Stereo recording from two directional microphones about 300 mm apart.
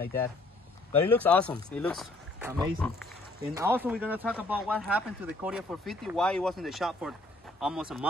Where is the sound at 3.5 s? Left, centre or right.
Centre.